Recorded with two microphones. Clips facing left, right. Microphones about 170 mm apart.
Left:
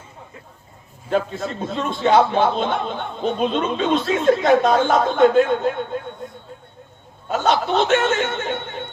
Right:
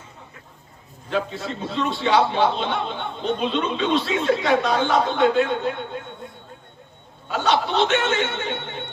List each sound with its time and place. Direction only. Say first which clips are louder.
1.1 s a man's voice: left 4 dB; 45° left (ahead or behind)
6.2 s a sound: left 4 dB; 45° left (ahead or behind)
7.3 s a man's voice: left 2 dB; 45° left (ahead or behind)